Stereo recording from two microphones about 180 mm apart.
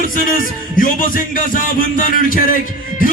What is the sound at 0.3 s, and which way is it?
A man's voice, 50° left (ahead or behind).